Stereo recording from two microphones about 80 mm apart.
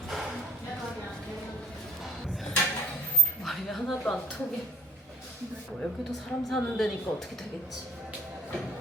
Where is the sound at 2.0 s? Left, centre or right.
Centre.